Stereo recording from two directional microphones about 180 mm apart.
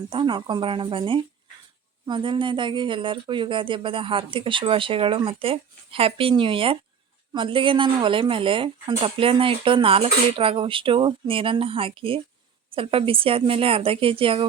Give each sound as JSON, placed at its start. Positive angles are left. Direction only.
{"t": 0.1, "sound": "speech", "side_deg": -25}